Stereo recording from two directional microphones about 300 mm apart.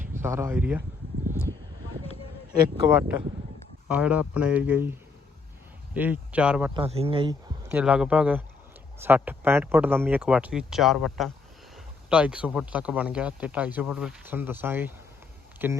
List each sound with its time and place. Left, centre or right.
0.0 s speech: centre
3.8 s speech: centre
6.7 s speech: centre
7.7 s speech: centre